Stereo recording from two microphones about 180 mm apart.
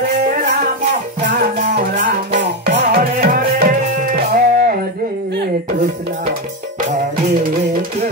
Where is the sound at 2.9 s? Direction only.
55° right (ahead or behind).